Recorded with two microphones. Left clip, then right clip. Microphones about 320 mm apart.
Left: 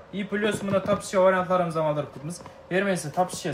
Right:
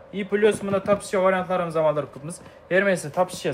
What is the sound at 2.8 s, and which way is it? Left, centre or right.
Speech, right.